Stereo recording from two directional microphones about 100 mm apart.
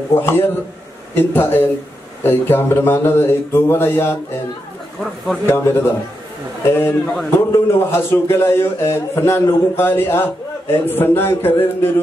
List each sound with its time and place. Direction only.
0.1 s speech: 25° left (ahead or behind)
5.5 s speech: 25° left (ahead or behind)